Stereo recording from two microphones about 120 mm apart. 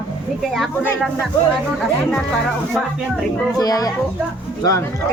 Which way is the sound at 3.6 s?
30° left (ahead or behind).